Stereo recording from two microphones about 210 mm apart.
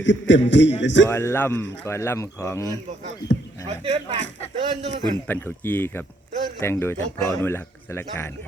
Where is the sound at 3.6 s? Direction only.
25° right (ahead or behind).